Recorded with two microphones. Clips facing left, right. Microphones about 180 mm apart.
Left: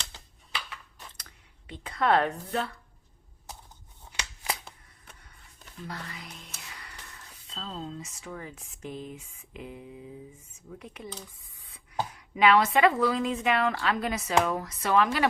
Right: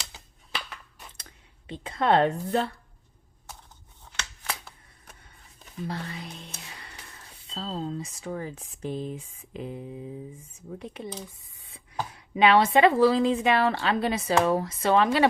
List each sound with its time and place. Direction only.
1.1 s speech: 25° right (ahead or behind)
4.1 s a sound: 15° left (ahead or behind)
5.9 s music: 30° right (ahead or behind)
7.5 s speech: 35° right (ahead or behind)